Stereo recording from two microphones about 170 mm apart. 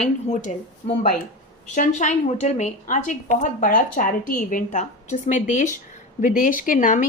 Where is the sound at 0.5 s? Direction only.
40° left (ahead or behind).